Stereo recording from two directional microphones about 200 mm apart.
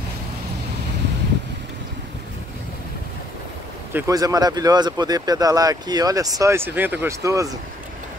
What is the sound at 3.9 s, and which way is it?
Speech, 15° right (ahead or behind).